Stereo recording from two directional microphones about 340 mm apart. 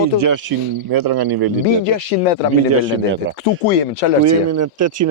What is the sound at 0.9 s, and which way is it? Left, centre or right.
Speech, right.